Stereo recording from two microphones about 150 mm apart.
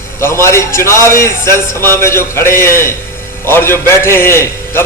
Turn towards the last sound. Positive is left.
turn(degrees=15)  # may be behind; listen again after turning